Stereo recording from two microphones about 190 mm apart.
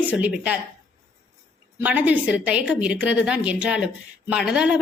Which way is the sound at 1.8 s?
10° right (ahead or behind).